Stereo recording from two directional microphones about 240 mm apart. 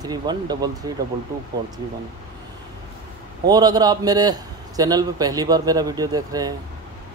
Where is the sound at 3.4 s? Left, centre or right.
Centre.